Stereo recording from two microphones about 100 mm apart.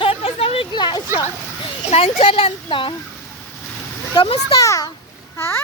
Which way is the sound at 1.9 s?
80° left.